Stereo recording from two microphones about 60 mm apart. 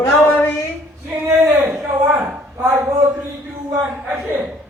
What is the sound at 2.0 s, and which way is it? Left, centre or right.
Speech, right.